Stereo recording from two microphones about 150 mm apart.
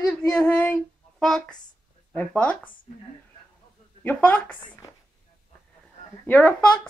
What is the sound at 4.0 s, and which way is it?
Speech, 10° left (ahead or behind).